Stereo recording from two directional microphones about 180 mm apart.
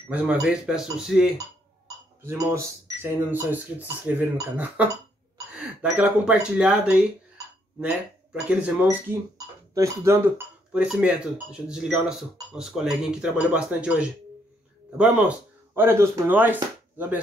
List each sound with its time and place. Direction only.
0.1 s speech: 5° right (ahead or behind)
2.2 s speech: 15° right (ahead or behind)